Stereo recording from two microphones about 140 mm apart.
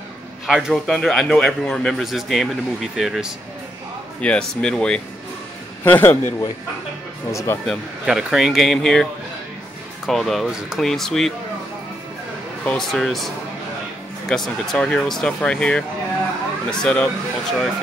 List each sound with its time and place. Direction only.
0.5 s a man's voice: 5° right (ahead or behind)
4.2 s speech: 10° left (ahead or behind)
8.0 s a man's voice: 5° right (ahead or behind)
10.0 s a man's voice: centre (ahead or behind)
12.6 s a man's voice: 5° left (ahead or behind)
14.3 s a man's voice: 5° left (ahead or behind)